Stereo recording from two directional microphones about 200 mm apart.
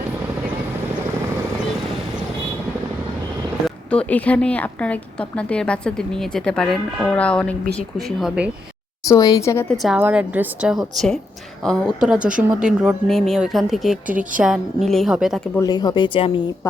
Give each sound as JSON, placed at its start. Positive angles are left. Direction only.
{"t": 3.8, "sound": "a woman's voice", "side_deg": 5}
{"t": 9.0, "sound": "speech", "side_deg": 20}
{"t": 9.7, "sound": "a woman's voice", "side_deg": 0}
{"t": 15.5, "sound": "speech", "side_deg": 20}